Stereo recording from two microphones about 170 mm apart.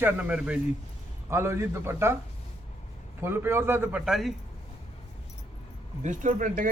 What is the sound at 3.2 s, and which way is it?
A man's voice, 15° right (ahead or behind).